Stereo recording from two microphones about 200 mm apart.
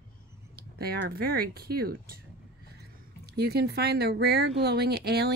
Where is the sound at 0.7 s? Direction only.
50° right (ahead or behind).